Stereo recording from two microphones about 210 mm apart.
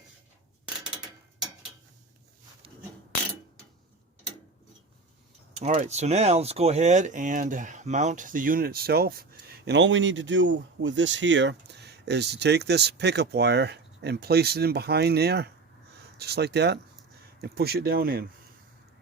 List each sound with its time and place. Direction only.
5.5 s speech: 35° right (ahead or behind)
9.6 s speech: 60° right (ahead or behind)